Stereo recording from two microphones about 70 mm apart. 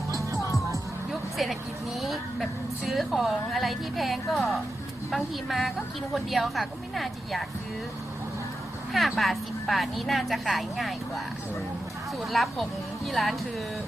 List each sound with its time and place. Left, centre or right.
1.4 s a woman's voice: centre
8.9 s a woman's voice: centre
12.2 s a woman's voice: centre